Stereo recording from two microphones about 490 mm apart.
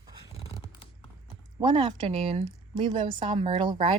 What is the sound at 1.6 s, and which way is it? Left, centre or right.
A woman's voice, centre.